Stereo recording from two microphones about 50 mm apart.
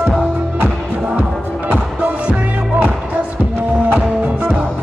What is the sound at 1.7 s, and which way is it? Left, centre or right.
Music, right.